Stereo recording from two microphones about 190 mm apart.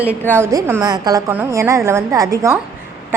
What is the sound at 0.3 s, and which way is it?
A woman's voice, 10° right (ahead or behind).